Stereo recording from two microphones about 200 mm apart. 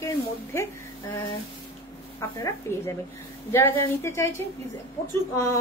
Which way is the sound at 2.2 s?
15° left (ahead or behind).